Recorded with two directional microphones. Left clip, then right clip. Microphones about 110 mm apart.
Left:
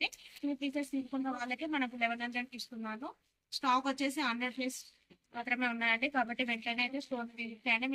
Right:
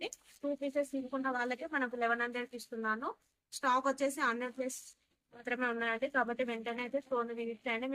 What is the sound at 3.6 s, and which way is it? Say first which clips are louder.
Speech: right 1 dB; 45° right (ahead or behind).